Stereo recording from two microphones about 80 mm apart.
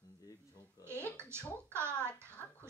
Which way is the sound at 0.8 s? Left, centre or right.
Right.